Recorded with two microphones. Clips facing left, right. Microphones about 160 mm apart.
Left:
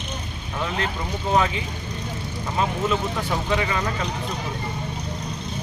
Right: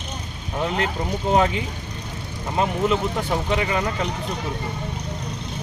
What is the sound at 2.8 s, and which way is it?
Speech, 20° right (ahead or behind).